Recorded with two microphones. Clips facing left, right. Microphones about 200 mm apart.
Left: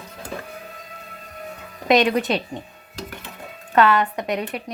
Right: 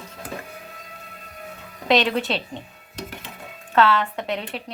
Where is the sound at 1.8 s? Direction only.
15° left (ahead or behind).